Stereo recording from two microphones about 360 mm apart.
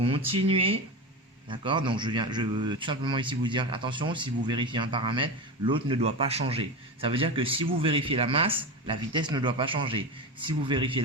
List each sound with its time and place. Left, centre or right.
0.0 s a man's voice: centre